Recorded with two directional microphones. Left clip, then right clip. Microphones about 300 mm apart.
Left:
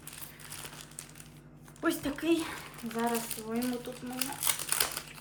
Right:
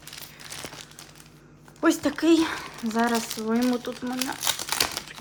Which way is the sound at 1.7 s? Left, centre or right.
Centre.